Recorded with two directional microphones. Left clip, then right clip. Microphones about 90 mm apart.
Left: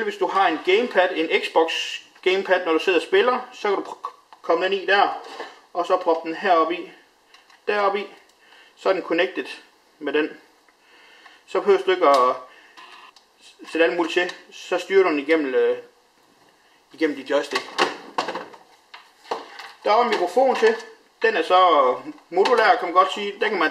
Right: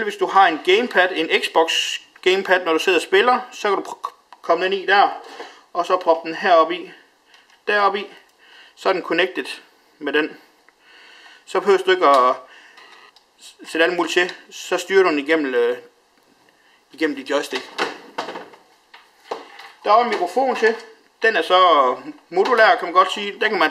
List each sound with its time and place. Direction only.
0.0 s speech: 40° right (ahead or behind)
13.4 s speech: 50° right (ahead or behind)
16.9 s speech: 45° right (ahead or behind)
17.6 s cash register: 10° left (ahead or behind)
19.8 s speech: 30° right (ahead or behind); by 23.7 s 50° right (ahead or behind)